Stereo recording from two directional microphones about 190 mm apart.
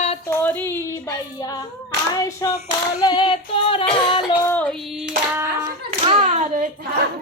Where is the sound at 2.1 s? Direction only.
15° left (ahead or behind).